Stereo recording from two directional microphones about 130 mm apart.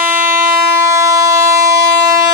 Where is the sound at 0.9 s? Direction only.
25° right (ahead or behind).